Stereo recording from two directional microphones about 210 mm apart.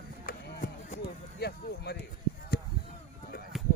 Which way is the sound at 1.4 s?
50° left (ahead or behind).